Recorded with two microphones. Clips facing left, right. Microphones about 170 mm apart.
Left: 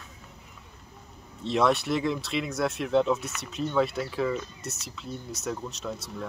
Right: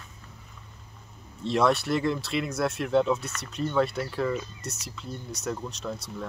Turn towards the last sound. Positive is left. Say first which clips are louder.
# even
turn(degrees=0)  # may be behind; listen again after turning